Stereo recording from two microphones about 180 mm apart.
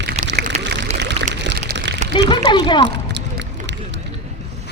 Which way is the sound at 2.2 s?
25° left (ahead or behind).